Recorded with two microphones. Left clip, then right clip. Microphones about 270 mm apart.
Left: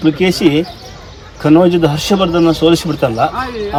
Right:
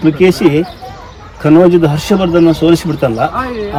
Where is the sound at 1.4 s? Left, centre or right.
Centre.